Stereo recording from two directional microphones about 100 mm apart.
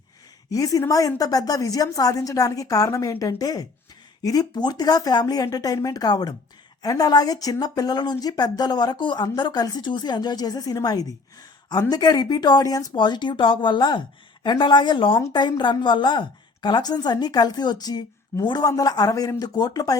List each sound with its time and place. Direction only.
0.5 s a woman's voice: 35° left (ahead or behind)